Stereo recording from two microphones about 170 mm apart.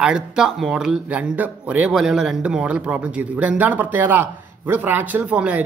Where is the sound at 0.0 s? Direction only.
5° right (ahead or behind).